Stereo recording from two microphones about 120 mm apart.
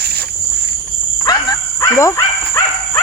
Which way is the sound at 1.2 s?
30° left (ahead or behind).